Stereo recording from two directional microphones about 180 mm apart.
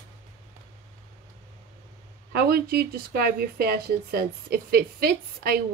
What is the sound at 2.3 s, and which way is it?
Speech, 60° right (ahead or behind).